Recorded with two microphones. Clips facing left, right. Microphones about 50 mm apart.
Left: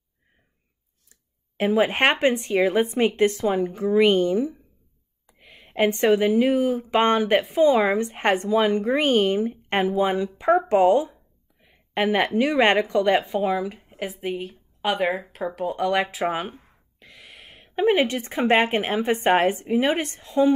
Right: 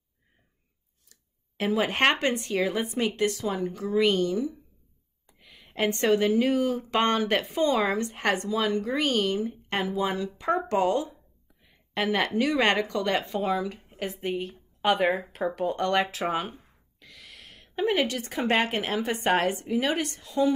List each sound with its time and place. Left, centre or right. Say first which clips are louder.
1.6 s speech: left 4 dB; centre
7.9 s speech: left 5 dB; left
11.6 s a sound: left 5 dB; left
12.4 s a woman's voice: left 5 dB; left